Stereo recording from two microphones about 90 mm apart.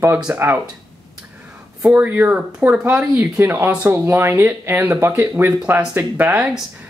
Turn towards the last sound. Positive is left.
turn(degrees=-20)  # may be behind; listen again after turning